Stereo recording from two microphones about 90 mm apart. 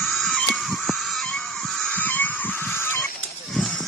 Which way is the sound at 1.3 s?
5° left (ahead or behind).